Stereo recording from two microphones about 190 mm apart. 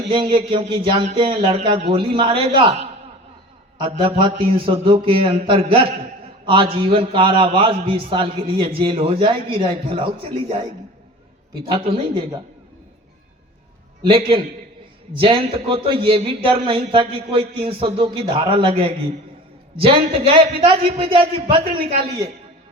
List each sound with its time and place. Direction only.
0.1 s a man's voice: 25° right (ahead or behind)
4.2 s a man's voice: 30° right (ahead or behind)
11.7 s a man's voice: 25° right (ahead or behind)
14.1 s a man's voice: 30° right (ahead or behind)